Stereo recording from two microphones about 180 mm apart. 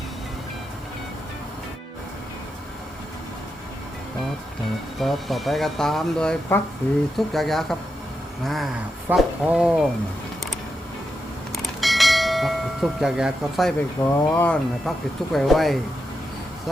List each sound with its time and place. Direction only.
4.9 s speech: centre (ahead or behind)
11.8 s church bell: centre (ahead or behind)
14.0 s speech: 20° left (ahead or behind)
14.3 s speech: 5° left (ahead or behind)